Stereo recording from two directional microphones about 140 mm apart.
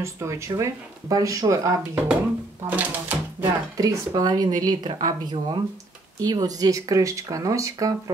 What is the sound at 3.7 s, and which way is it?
Speech, 25° right (ahead or behind).